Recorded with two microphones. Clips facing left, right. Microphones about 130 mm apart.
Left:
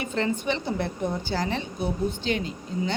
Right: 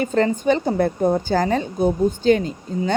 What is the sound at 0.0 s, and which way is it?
A woman's voice, 45° right (ahead or behind).